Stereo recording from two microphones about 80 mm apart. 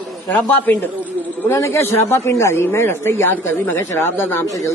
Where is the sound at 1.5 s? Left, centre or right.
Left.